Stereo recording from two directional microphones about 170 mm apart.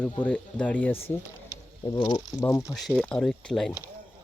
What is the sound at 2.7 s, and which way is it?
Speech, centre (ahead or behind).